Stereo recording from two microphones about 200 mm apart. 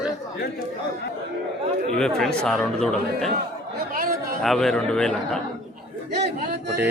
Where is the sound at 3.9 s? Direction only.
45° right (ahead or behind).